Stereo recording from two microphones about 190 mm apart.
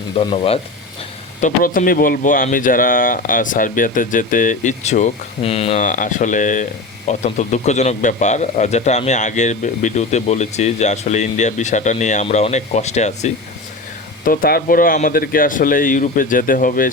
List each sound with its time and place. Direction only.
0.2 s speech: 30° left (ahead or behind)
1.4 s speech: 45° left (ahead or behind)
14.3 s speech: 50° left (ahead or behind)